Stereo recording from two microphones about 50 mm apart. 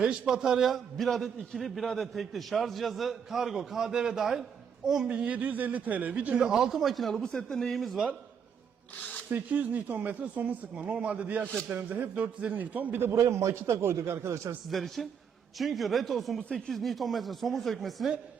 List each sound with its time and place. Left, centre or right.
0.0 s a man's voice: centre
0.7 s a man's voice: centre
5.0 s speech: right
6.5 s a man's voice: centre
7.2 s speech: centre
9.3 s a man's voice: right
13.1 s a man's voice: right
14.7 s a man's voice: centre